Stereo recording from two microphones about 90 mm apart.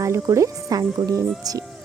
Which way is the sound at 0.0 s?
35° right (ahead or behind).